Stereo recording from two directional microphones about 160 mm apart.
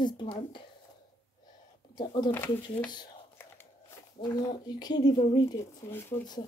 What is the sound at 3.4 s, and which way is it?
Biting, 15° left (ahead or behind).